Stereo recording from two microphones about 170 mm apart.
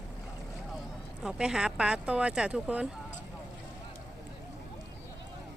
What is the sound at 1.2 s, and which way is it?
Speech, 5° right (ahead or behind).